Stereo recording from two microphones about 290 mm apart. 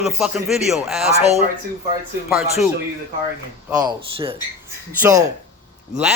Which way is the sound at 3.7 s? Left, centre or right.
Centre.